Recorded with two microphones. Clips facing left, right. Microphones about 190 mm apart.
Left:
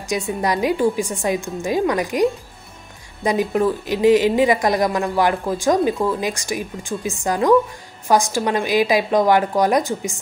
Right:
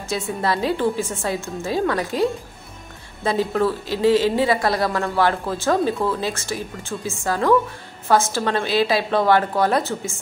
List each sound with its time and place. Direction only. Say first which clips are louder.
0.4 s speech: left 2 dB; 15° left (ahead or behind)
3.3 s speech: left 2 dB; 15° left (ahead or behind)